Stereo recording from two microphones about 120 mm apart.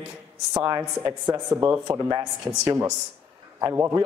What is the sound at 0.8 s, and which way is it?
A man's voice, 20° right (ahead or behind).